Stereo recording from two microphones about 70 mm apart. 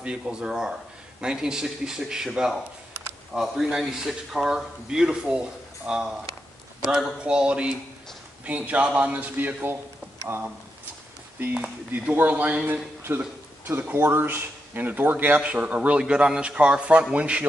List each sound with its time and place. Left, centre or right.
0.0 s a man's voice: centre
7.2 s speech: centre
11.3 s speech: right